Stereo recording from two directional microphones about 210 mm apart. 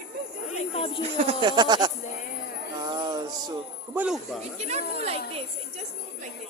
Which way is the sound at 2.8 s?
20° right (ahead or behind).